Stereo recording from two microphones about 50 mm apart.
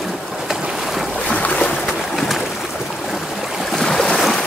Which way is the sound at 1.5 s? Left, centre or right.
Left.